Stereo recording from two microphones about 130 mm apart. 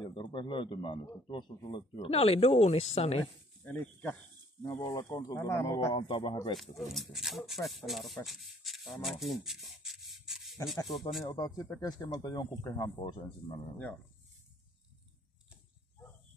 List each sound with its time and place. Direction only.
0.0 s speech: 40° left (ahead or behind)
3.6 s speech: 10° left (ahead or behind)
4.8 s speech: 30° left (ahead or behind)
5.9 s speech: 40° left (ahead or behind)
6.5 s speech: centre (ahead or behind)
11.3 s speech: 30° left (ahead or behind)